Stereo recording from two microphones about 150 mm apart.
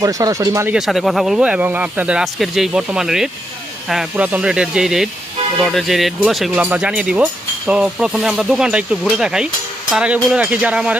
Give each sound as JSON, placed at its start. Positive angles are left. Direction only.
{"t": 0.0, "sound": "speech", "side_deg": -25}
{"t": 0.7, "sound": "speech", "side_deg": 0}